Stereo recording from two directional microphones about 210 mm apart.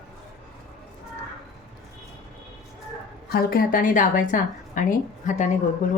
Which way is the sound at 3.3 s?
45° left (ahead or behind).